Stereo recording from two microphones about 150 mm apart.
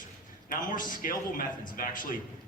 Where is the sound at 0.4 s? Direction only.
65° left (ahead or behind).